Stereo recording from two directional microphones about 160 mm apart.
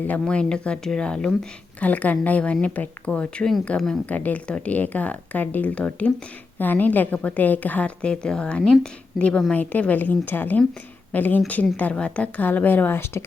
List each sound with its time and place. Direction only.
0.1 s a woman's voice: 5° left (ahead or behind)